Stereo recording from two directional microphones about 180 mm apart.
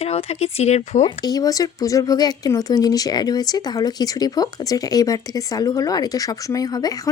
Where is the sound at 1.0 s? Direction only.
20° left (ahead or behind).